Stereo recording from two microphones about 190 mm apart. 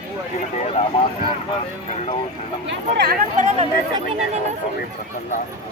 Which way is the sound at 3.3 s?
40° right (ahead or behind).